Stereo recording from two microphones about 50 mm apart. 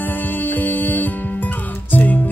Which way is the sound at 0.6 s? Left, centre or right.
Left.